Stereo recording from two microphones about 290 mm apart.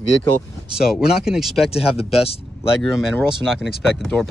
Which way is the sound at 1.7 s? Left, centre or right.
Centre.